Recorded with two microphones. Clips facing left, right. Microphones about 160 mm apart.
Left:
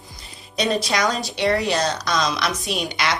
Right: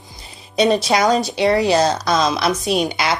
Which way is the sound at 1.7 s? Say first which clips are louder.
Right 6 dB; 35° right (ahead or behind).